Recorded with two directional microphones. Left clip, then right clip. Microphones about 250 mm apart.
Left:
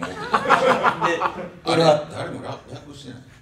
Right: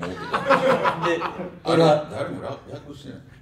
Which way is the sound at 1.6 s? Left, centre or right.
Centre.